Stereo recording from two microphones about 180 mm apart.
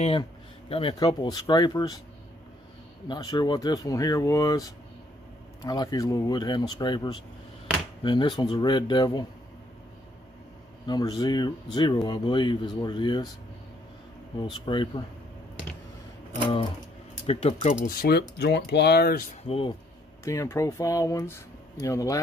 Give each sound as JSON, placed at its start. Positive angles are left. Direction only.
{"t": 0.0, "sound": "speech", "side_deg": 30}
{"t": 3.1, "sound": "speech", "side_deg": 25}
{"t": 10.9, "sound": "speech", "side_deg": 20}
{"t": 14.4, "sound": "speech", "side_deg": 25}
{"t": 17.3, "sound": "speech", "side_deg": 35}
{"t": 17.8, "sound": "speech", "side_deg": 60}
{"t": 19.4, "sound": "speech", "side_deg": 30}
{"t": 20.2, "sound": "speech", "side_deg": 15}